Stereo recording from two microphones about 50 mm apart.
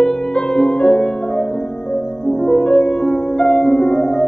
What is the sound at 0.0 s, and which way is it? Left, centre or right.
Music, centre.